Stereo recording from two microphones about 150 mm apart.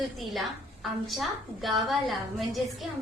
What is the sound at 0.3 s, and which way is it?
A woman's voice, centre (ahead or behind).